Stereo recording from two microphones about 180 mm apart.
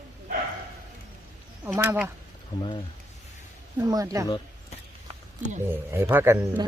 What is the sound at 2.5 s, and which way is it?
Speech, 20° left (ahead or behind).